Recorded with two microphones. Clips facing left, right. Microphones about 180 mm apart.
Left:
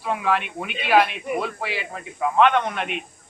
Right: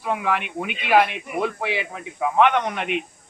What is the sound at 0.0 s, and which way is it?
A man's voice, 15° right (ahead or behind).